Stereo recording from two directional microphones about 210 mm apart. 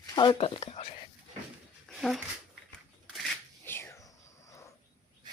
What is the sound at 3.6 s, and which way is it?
Whispering, 10° left (ahead or behind).